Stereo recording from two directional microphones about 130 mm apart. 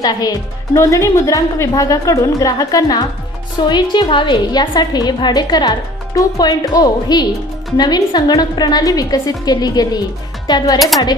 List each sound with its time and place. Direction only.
0.0 s a woman's voice: 30° left (ahead or behind)